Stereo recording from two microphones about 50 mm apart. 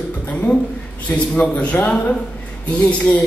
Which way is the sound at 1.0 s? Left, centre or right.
Left.